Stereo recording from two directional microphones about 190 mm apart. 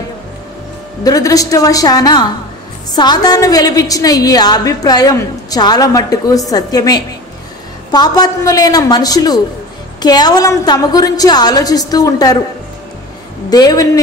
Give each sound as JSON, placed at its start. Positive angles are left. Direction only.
{"t": 1.0, "sound": "a woman's voice", "side_deg": 20}
{"t": 13.5, "sound": "a woman's voice", "side_deg": 20}